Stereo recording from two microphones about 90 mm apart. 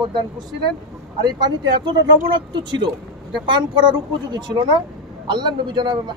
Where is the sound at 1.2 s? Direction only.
55° right (ahead or behind).